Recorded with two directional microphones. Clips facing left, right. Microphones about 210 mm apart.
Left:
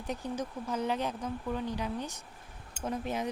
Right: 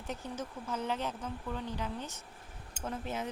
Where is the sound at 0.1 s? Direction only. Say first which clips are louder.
Left 4 dB; 15° left (ahead or behind).